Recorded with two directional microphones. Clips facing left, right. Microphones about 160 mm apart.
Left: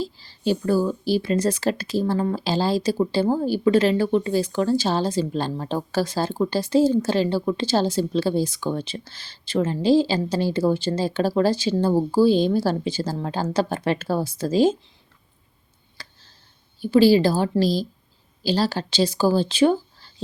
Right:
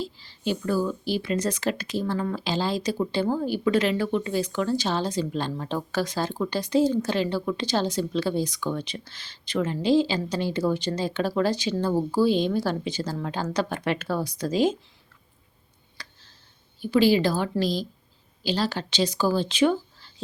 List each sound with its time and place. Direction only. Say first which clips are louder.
0.0 s speech: left 5 dB; 35° left (ahead or behind)
16.0 s tick: left 1 dB; 30° left (ahead or behind)
16.8 s speech: left 4 dB; 35° left (ahead or behind)